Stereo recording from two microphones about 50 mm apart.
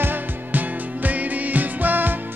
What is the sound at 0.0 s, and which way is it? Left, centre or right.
Music, right.